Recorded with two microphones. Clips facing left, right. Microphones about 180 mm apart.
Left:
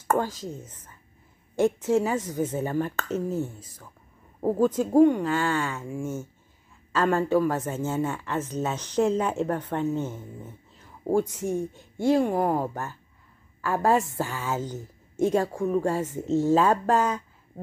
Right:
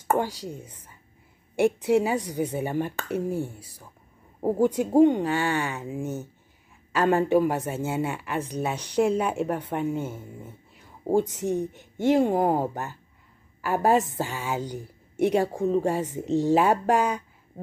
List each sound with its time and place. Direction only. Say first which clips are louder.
0.1 s speech: even; 15° right (ahead or behind)